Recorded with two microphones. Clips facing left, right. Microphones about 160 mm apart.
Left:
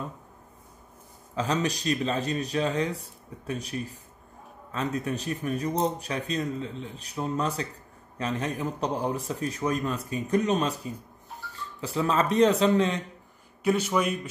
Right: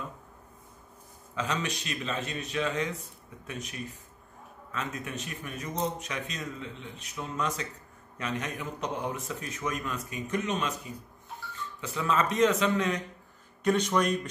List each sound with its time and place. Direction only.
1.3 s speech: 35° left (ahead or behind)
13.7 s speech: 5° left (ahead or behind)